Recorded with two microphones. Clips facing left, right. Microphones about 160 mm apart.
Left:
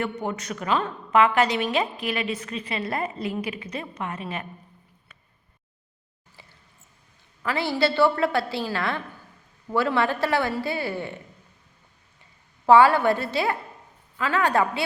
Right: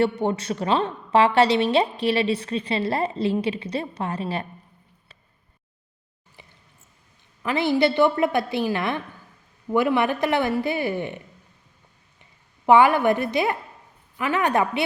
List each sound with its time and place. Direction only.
0.0 s a woman's voice: 30° right (ahead or behind)
6.4 s a sound: 20° right (ahead or behind)
7.4 s a woman's voice: 20° right (ahead or behind)
12.2 s a woman's voice: 20° right (ahead or behind)